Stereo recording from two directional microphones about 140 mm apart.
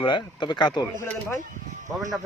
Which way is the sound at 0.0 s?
35° left (ahead or behind).